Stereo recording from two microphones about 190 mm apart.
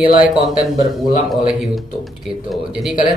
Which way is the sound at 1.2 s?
Centre (ahead or behind).